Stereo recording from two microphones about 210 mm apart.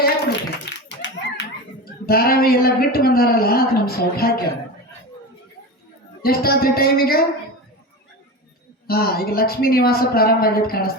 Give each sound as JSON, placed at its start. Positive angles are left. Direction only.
{"t": 0.0, "sound": "clapping", "side_deg": 55}
{"t": 6.2, "sound": "a woman's voice", "side_deg": 45}
{"t": 8.9, "sound": "a woman's voice", "side_deg": 45}